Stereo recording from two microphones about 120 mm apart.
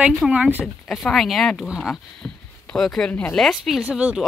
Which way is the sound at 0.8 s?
5° left (ahead or behind).